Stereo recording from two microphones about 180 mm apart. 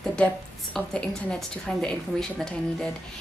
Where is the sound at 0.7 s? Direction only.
5° left (ahead or behind).